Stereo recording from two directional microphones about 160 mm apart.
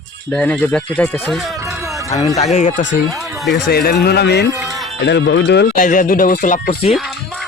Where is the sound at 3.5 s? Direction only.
75° left (ahead or behind); by 4.5 s 90° left.